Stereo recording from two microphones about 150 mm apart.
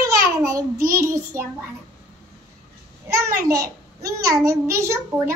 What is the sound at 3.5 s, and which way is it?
A child's voice, 20° right (ahead or behind).